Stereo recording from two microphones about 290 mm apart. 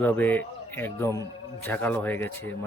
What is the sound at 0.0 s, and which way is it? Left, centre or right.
Speech, centre.